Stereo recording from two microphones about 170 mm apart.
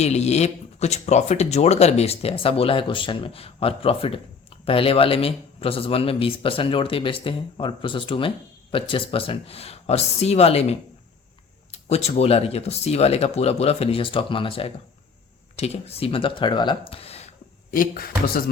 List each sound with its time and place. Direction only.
0.0 s speech: 40° left (ahead or behind)
16.9 s a sound: 35° left (ahead or behind)
17.7 s speech: 55° left (ahead or behind)